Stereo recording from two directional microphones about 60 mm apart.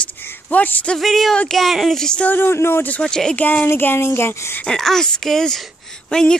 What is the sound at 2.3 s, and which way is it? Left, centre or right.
Speech, left.